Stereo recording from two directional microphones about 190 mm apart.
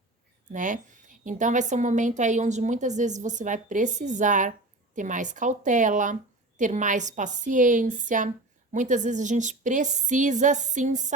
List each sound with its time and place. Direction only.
0.5 s a woman's voice: 45° right (ahead or behind)